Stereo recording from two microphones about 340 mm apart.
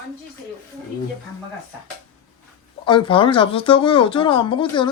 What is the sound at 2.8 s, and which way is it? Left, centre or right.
Speech, centre.